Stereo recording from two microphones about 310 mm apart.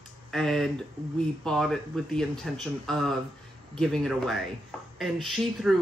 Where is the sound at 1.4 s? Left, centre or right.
Centre.